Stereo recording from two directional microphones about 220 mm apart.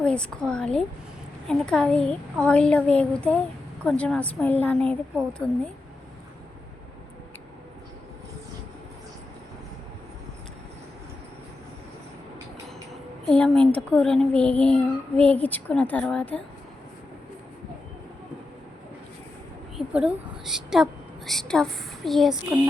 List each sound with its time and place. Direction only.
0.0 s a child's voice: 5° left (ahead or behind)
13.3 s a child's voice: 5° left (ahead or behind)
19.7 s a woman's voice: centre (ahead or behind)